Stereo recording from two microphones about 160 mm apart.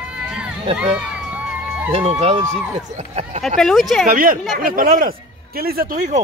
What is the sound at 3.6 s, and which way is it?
Speech, centre (ahead or behind).